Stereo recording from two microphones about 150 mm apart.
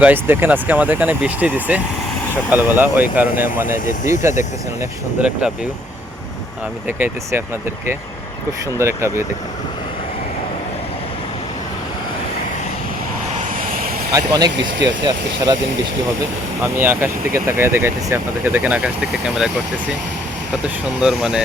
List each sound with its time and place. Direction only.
0.0 s speech: 15° right (ahead or behind)
6.8 s speech: 15° right (ahead or behind)
8.8 s speech: 20° right (ahead or behind)
13.4 s vehicle: 60° right (ahead or behind)
14.1 s speech: 25° right (ahead or behind)
16.7 s speech: 15° right (ahead or behind)
21.0 s speech: 5° right (ahead or behind)